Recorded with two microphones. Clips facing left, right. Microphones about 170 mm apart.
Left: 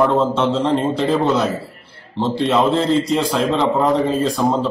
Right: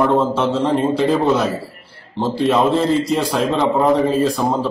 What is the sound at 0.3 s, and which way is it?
Speech, 10° right (ahead or behind).